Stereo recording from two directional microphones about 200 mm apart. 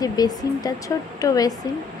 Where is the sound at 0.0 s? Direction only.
20° left (ahead or behind).